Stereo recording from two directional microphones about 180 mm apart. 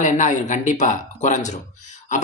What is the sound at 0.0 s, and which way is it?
Speech, 45° left (ahead or behind).